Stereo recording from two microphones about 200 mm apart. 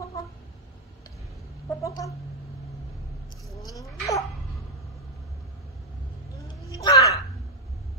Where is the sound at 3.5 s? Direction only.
15° left (ahead or behind).